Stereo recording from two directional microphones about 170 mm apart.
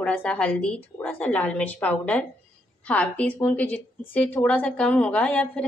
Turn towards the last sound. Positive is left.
turn(degrees=5)  # may be behind; listen again after turning